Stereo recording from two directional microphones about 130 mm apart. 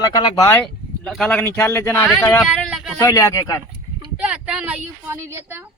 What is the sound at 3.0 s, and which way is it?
Speech, 25° left (ahead or behind).